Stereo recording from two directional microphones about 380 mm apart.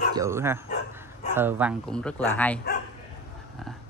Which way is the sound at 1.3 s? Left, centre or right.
Centre.